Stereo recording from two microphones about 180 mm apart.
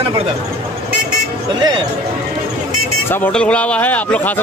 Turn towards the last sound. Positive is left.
turn(degrees=10)  # may be behind; listen again after turning